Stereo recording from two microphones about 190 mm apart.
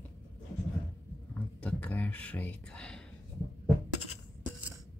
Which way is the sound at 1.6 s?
5° left (ahead or behind).